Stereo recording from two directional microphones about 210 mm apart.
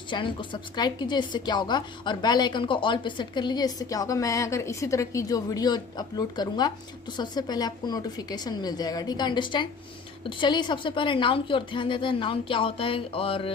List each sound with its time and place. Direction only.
0.1 s a woman's voice: 25° left (ahead or behind)